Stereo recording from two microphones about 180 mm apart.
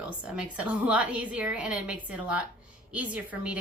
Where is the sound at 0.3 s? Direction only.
5° right (ahead or behind).